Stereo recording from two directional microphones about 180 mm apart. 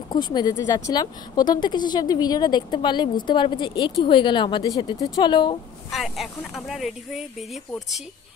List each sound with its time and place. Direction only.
0.1 s speech: 25° left (ahead or behind)
5.9 s speech: centre (ahead or behind)